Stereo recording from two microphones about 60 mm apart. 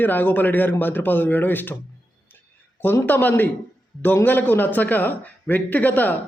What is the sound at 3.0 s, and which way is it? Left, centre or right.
A man's voice, left.